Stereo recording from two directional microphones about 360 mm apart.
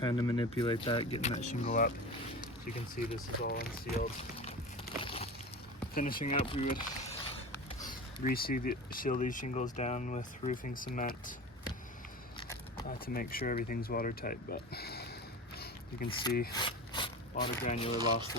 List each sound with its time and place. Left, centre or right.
0.0 s speech: centre
2.9 s speech: left
5.0 s a sound: centre
5.9 s speech: left
7.5 s a sound: centre
7.9 s speech: left
13.1 s speech: left
15.5 s a sound: left
16.0 s speech: centre
16.6 s rub: centre
17.6 s speech: centre
17.9 s speech: centre